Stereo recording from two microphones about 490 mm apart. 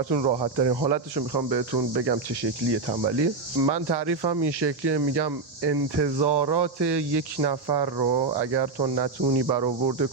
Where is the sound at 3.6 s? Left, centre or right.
Right.